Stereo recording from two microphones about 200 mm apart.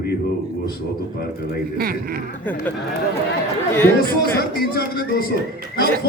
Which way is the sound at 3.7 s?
10° left (ahead or behind).